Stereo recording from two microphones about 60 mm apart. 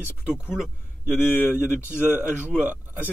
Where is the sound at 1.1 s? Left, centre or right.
Left.